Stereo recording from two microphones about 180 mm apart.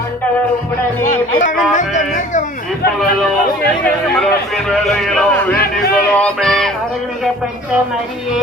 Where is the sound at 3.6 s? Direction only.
5° left (ahead or behind).